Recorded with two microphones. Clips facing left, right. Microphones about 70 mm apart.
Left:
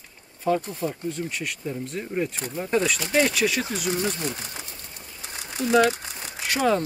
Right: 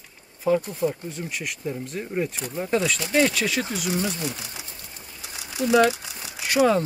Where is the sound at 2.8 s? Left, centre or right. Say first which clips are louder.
Right 1 dB; centre.